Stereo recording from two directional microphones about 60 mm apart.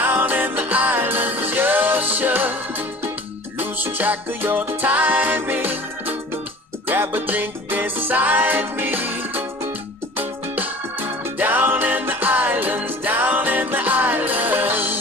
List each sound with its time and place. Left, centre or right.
0.0 s music: right
6.8 s music: right